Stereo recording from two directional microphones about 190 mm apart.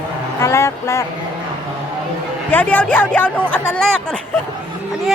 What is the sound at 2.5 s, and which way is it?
Speech, 10° left (ahead or behind).